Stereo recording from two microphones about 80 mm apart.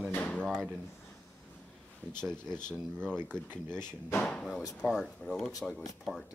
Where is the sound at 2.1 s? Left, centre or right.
Centre.